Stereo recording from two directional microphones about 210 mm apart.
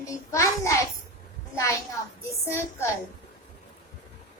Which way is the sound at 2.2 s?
10° left (ahead or behind).